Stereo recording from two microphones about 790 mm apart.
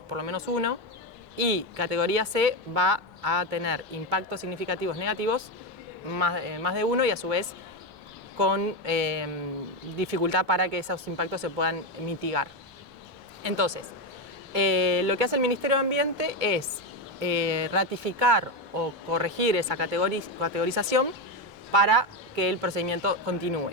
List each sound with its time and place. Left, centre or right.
0.1 s speech: right
6.1 s a woman's voice: right
21.7 s a woman's voice: right